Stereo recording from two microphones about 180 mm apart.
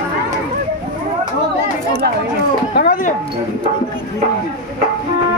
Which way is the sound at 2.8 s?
55° left (ahead or behind).